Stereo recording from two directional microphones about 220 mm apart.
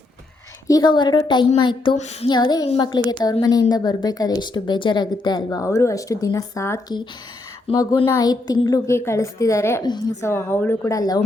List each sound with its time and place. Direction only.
0.7 s a woman's voice: 20° left (ahead or behind)